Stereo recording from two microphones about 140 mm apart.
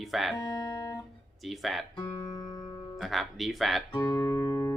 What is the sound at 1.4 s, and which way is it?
Speech, centre (ahead or behind).